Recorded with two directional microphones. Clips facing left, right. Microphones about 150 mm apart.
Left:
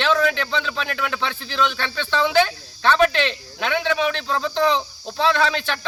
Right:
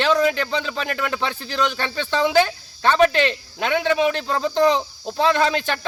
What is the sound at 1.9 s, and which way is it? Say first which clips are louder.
Speech: right 1 dB; 45° right (ahead or behind).